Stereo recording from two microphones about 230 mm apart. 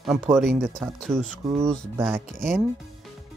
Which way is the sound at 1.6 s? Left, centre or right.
Centre.